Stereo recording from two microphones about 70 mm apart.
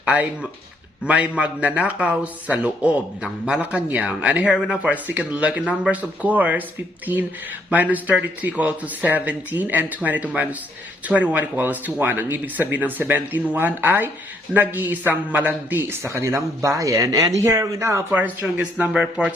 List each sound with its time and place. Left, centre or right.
0.0 s speech: right
4.9 s speech: right
7.7 s speech: right
16.0 s speech: right
18.1 s speech: right